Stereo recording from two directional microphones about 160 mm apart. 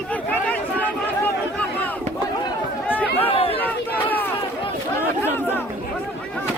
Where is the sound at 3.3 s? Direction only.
35° left (ahead or behind).